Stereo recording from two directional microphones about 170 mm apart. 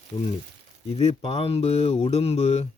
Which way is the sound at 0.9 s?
35° left (ahead or behind).